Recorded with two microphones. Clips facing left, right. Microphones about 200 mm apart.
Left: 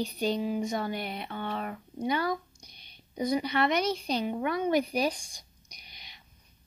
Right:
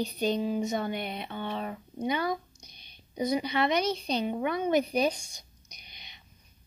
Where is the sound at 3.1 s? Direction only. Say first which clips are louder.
Even; 25° right (ahead or behind).